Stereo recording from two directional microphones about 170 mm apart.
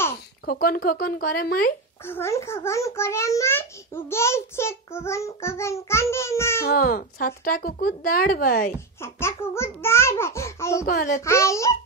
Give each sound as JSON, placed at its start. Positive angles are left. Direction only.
{"t": 0.5, "sound": "speech", "side_deg": 60}
{"t": 2.0, "sound": "a child's voice", "side_deg": 15}
{"t": 6.6, "sound": "speech", "side_deg": 60}
{"t": 8.7, "sound": "a child's voice", "side_deg": 15}
{"t": 10.9, "sound": "a child's voice", "side_deg": 65}
{"t": 11.1, "sound": "a child's voice", "side_deg": 15}